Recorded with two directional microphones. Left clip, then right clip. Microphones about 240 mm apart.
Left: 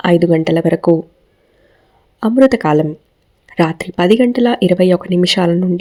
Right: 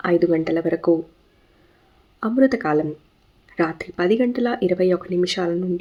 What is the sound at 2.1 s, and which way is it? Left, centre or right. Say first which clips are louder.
A woman's voice: left 8 dB; left.